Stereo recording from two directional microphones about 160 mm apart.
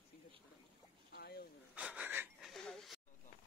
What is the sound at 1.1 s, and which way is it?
Boat, 75° left (ahead or behind).